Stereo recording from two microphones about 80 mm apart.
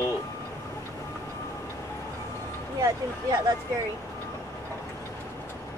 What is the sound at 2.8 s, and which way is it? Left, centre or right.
Speech, right.